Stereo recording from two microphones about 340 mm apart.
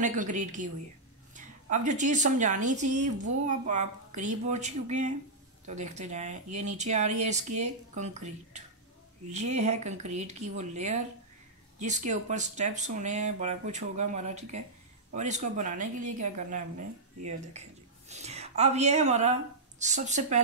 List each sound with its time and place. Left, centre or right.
0.0 s a woman's voice: right